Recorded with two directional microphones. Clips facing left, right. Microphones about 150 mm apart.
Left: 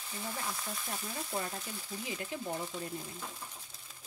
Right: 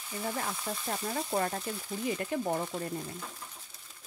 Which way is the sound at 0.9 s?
60° right (ahead or behind).